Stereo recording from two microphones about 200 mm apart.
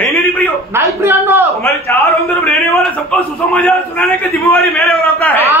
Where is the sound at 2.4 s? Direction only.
Centre (ahead or behind).